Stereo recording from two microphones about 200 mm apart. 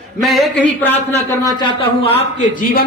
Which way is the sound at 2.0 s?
30° left (ahead or behind).